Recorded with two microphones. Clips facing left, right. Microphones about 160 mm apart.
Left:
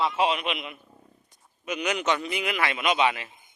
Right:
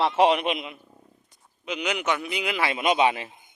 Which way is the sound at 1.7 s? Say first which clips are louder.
Even; 15° right (ahead or behind).